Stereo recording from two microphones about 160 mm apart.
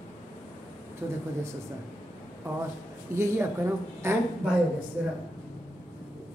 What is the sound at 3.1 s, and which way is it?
A woman's voice, 15° right (ahead or behind).